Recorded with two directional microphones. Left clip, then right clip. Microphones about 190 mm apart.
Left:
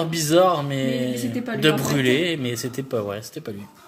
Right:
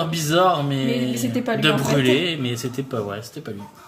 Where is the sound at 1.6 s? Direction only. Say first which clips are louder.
Even; 35° left (ahead or behind).